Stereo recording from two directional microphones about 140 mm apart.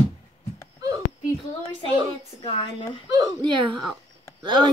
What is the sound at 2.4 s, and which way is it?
Speech, 40° left (ahead or behind).